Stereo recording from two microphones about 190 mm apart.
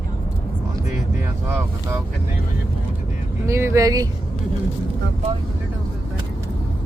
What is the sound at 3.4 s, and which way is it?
Speech, 15° right (ahead or behind).